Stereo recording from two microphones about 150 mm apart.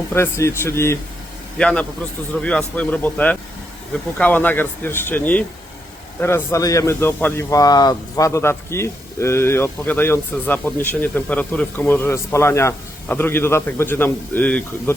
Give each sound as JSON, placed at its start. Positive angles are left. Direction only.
{"t": 0.1, "sound": "speech", "side_deg": 15}